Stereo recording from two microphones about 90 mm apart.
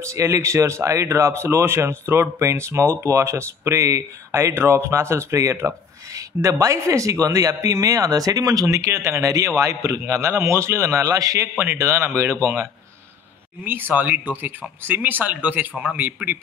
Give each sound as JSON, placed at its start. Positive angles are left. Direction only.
{"t": 0.0, "sound": "speech", "side_deg": -35}
{"t": 11.5, "sound": "speech", "side_deg": -30}
{"t": 13.7, "sound": "speech", "side_deg": -20}